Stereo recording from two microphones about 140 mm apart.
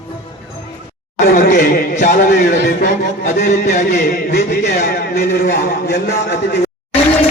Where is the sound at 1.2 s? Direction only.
75° left (ahead or behind).